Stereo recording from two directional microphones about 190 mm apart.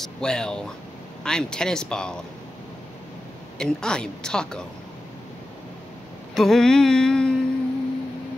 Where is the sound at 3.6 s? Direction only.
5° left (ahead or behind).